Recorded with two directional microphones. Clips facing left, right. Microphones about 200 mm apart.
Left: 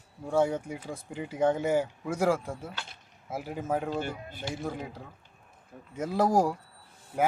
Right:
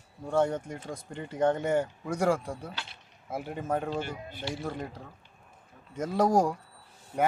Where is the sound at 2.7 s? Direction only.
50° left (ahead or behind).